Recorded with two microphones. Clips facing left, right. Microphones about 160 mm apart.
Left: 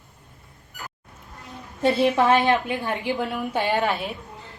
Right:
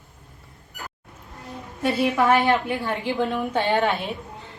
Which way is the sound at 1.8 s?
25° left (ahead or behind).